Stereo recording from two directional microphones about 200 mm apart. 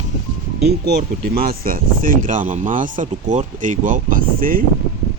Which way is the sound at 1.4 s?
45° right (ahead or behind).